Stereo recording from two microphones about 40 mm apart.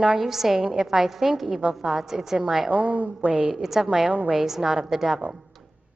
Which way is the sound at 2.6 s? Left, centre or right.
Right.